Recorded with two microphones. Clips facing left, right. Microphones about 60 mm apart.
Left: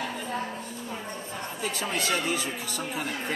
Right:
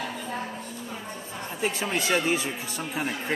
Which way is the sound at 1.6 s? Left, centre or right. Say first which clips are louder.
Right 3 dB; right.